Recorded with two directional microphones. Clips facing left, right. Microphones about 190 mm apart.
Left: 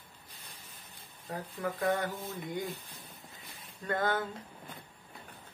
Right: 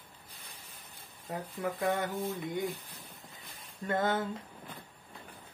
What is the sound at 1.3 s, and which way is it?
Speech, 10° right (ahead or behind).